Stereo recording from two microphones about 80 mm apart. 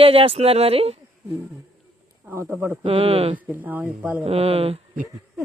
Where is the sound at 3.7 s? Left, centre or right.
Right.